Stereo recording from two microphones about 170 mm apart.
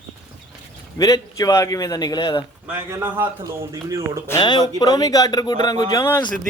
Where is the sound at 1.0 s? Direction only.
20° left (ahead or behind).